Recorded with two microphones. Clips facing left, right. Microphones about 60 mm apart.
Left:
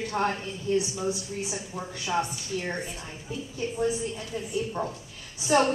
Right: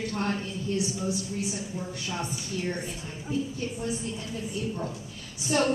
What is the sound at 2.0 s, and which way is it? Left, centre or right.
Speech, left.